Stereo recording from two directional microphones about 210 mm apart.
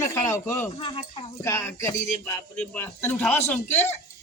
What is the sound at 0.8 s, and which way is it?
Speech, 25° left (ahead or behind).